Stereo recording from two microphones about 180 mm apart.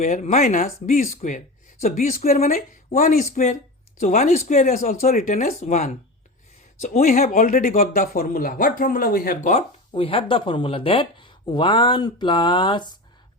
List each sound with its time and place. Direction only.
0.0 s speech: 45° left (ahead or behind)
6.8 s speech: 55° left (ahead or behind)
9.9 s speech: 30° left (ahead or behind)